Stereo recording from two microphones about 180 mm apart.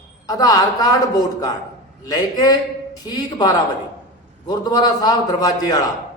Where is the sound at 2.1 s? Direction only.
20° left (ahead or behind).